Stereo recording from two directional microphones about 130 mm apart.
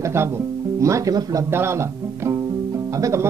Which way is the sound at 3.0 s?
25° right (ahead or behind).